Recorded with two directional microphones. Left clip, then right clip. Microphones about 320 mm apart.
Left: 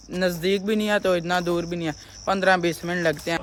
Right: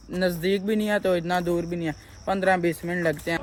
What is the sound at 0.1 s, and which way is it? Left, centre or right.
Speech, centre.